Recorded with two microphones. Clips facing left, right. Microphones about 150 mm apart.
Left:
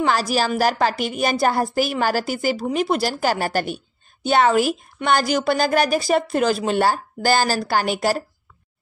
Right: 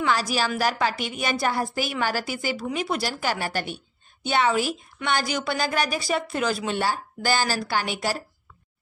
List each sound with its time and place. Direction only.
0.0 s a woman's voice: 40° left (ahead or behind)